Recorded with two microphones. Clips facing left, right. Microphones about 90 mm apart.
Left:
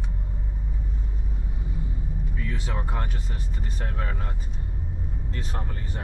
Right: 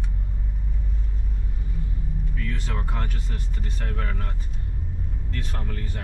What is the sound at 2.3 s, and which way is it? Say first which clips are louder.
Speech: even; 15° left (ahead or behind).